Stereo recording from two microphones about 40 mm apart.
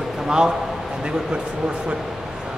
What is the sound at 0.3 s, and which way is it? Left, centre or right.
Speech, centre.